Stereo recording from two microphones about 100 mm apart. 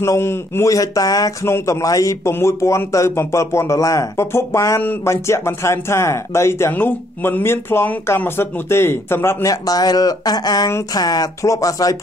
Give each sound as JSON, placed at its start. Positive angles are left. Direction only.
{"t": 0.0, "sound": "speech", "side_deg": 25}
{"t": 1.4, "sound": "speech", "side_deg": 30}